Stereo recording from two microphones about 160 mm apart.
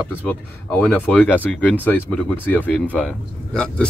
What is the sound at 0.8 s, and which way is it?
Speech, 5° left (ahead or behind).